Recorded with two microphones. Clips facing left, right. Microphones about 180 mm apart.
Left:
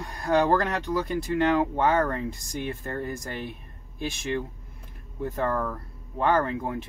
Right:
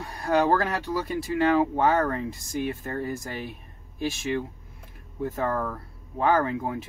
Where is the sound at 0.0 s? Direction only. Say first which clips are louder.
Even; centre (ahead or behind).